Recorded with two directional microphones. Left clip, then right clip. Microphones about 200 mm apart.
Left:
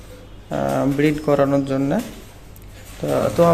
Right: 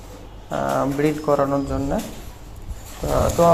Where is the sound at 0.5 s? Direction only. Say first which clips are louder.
Left 1 dB; 35° left (ahead or behind).